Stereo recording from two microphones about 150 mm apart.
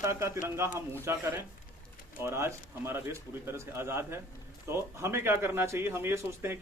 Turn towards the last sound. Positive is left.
turn(degrees=-15)  # may be behind; listen again after turning